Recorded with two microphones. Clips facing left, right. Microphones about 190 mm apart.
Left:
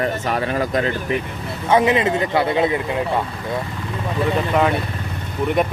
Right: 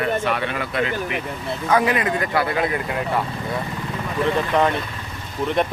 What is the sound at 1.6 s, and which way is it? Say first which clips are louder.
Speech: left 4 dB; 25° left (ahead or behind).